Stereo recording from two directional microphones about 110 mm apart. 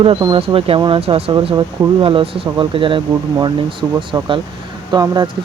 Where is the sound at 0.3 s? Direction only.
60° right (ahead or behind).